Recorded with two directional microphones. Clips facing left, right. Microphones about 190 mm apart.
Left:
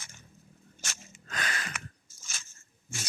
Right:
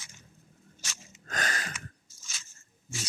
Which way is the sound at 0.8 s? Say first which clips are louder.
Left 3 dB; 55° left (ahead or behind).